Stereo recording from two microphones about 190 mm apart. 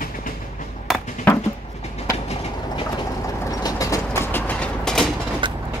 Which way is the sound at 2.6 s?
25° left (ahead or behind).